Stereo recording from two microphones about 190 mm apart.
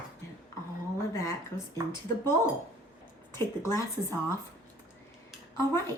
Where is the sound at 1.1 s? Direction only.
15° left (ahead or behind).